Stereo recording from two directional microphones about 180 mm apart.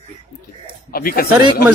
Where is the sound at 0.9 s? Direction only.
55° left (ahead or behind).